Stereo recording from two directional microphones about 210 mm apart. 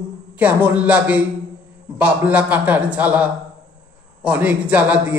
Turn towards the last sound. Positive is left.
turn(degrees=-5)  # may be behind; listen again after turning